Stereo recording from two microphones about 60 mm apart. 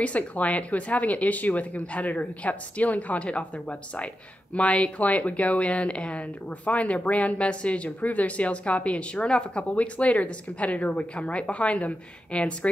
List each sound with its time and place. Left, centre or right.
0.0 s speech: left